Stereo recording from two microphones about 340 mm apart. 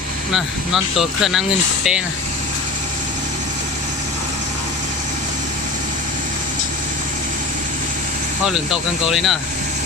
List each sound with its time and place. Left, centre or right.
0.3 s speech: centre
8.4 s speech: centre